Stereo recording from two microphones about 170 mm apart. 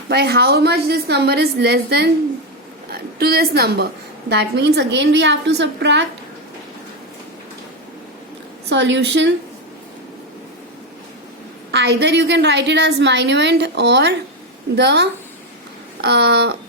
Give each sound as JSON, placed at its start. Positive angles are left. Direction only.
{"t": 0.1, "sound": "a woman's voice", "side_deg": -70}
{"t": 4.3, "sound": "a woman's voice", "side_deg": -85}
{"t": 8.7, "sound": "a woman's voice", "side_deg": -90}
{"t": 11.7, "sound": "a woman's voice", "side_deg": -90}